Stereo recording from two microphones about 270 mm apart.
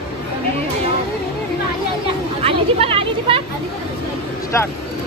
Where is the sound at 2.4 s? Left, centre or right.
Right.